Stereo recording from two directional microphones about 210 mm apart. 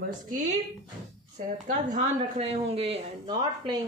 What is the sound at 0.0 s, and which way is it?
Speech, 40° right (ahead or behind).